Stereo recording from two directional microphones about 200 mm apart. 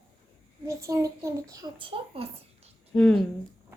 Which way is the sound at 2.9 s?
5° left (ahead or behind).